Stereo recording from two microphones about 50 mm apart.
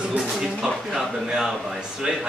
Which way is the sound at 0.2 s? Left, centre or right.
Centre.